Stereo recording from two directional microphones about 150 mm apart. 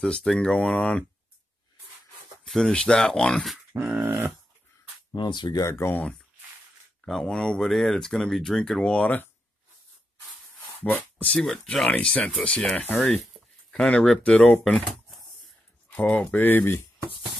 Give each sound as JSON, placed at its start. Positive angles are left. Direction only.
{"t": 0.0, "sound": "speech", "side_deg": 5}
{"t": 2.4, "sound": "speech", "side_deg": 5}
{"t": 3.7, "sound": "dog", "side_deg": -15}
{"t": 5.1, "sound": "speech", "side_deg": 30}
{"t": 10.8, "sound": "speech", "side_deg": 10}